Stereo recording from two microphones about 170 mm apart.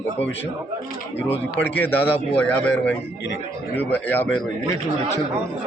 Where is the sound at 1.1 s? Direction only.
90° left.